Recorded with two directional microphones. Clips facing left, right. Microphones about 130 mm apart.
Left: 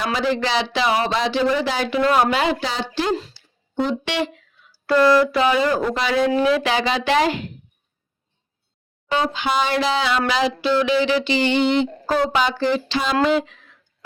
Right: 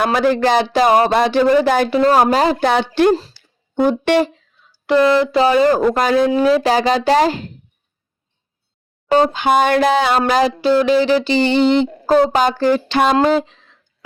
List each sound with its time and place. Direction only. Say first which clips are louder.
0.0 s speech: right 7 dB; 55° right (ahead or behind)
1.9 s speech: right 5 dB; 40° right (ahead or behind)
2.6 s a woman's voice: right 9 dB; 60° right (ahead or behind)
3.3 s a sound: right 5 dB; 55° right (ahead or behind)
4.7 s speech: right 2 dB; 20° right (ahead or behind); by 6.3 s 45° right (ahead or behind)
6.3 s speech: right 5 dB; 35° right (ahead or behind)
9.0 s speech: right 8 dB; 45° right (ahead or behind)
12.2 s speech: right 5 dB; 45° right (ahead or behind)
13.2 s speech: right 4 dB; 35° right (ahead or behind)